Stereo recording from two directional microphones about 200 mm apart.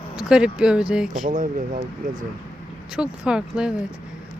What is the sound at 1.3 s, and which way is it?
Speech, 40° right (ahead or behind).